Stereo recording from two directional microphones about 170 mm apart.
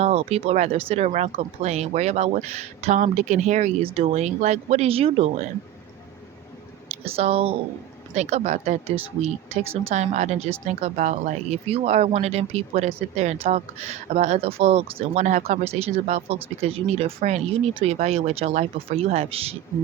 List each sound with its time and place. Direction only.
0.0 s speech: 35° right (ahead or behind)
6.8 s speech: 35° right (ahead or behind)
9.9 s speech: 45° right (ahead or behind)